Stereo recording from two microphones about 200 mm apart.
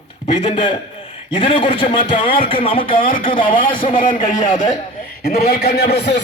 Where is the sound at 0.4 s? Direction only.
25° left (ahead or behind).